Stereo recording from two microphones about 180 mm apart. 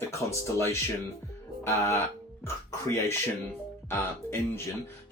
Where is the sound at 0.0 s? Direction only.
15° left (ahead or behind).